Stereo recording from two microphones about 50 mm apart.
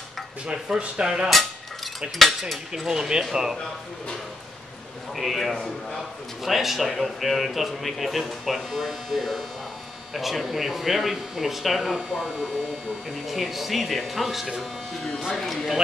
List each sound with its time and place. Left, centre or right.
0.5 s speech: centre
2.9 s speech: centre
5.1 s a man's voice: centre